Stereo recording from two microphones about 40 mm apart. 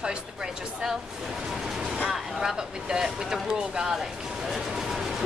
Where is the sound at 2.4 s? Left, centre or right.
Centre.